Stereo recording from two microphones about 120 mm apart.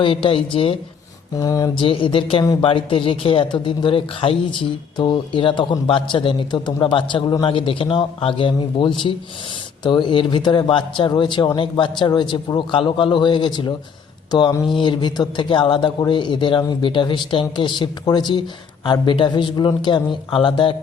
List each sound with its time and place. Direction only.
0.0 s a man's voice: 50° left (ahead or behind)
1.4 s speech: 30° left (ahead or behind)
1.8 s a man's voice: 45° left (ahead or behind)